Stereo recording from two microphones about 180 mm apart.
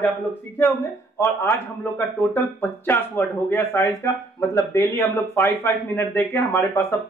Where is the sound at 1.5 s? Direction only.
10° left (ahead or behind).